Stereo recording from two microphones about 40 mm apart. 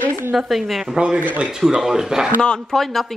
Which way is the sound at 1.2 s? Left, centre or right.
Right.